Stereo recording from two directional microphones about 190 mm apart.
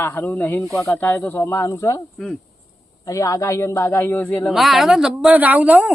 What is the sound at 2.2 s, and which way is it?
Speech, centre (ahead or behind).